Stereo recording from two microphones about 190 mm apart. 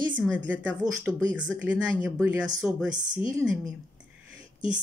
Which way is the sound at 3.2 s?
15° right (ahead or behind).